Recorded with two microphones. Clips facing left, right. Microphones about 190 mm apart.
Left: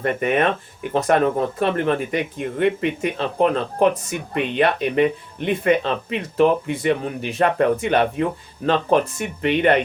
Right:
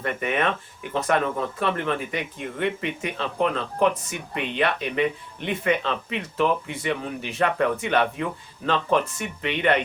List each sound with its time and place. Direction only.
0.0 s speech: 45° left (ahead or behind)